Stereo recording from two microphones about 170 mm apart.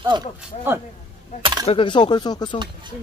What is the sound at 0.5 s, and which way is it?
Speech, 40° left (ahead or behind).